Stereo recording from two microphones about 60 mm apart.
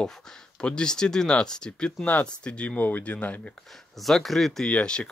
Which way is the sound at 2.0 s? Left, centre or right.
Left.